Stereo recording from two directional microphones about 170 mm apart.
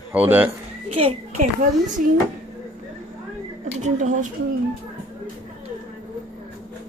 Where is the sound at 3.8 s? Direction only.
45° right (ahead or behind).